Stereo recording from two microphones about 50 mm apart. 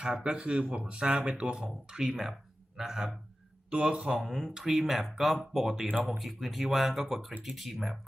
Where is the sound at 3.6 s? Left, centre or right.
Right.